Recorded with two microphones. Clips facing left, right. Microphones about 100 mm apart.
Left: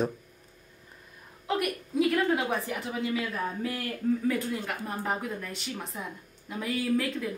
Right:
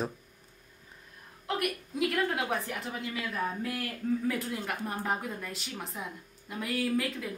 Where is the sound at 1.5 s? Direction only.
Centre (ahead or behind).